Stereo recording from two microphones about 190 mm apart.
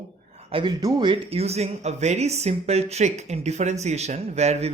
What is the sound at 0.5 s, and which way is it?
Speech, 25° right (ahead or behind).